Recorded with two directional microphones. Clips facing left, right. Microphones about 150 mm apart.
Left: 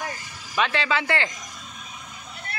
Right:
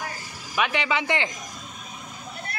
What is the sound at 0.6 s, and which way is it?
Speech, 15° right (ahead or behind).